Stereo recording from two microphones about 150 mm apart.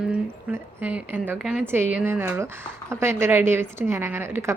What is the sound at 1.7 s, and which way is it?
A woman's voice, 15° right (ahead or behind).